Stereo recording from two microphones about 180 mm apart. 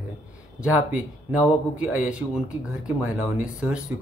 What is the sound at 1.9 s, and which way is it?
Speech, 5° right (ahead or behind).